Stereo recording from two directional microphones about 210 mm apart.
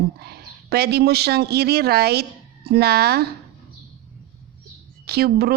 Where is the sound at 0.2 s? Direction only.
50° right (ahead or behind).